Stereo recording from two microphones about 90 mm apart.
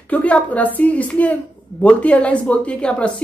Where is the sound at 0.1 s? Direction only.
15° left (ahead or behind).